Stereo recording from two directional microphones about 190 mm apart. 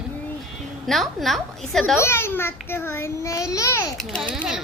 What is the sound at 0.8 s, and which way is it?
Speech, centre (ahead or behind).